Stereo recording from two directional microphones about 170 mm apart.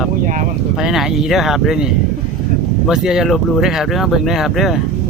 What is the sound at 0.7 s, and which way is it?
Speech, centre (ahead or behind).